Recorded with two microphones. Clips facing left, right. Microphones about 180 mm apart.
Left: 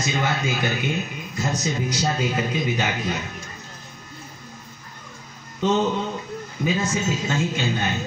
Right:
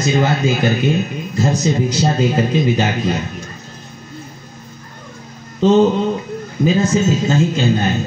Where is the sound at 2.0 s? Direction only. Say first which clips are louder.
Right 7 dB; 30° right (ahead or behind).